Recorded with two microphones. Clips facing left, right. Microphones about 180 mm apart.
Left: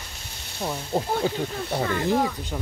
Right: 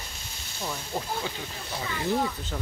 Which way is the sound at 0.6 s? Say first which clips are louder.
Left 6 dB; 30° left (ahead or behind).